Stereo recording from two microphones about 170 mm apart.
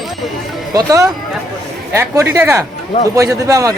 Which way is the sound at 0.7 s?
20° right (ahead or behind).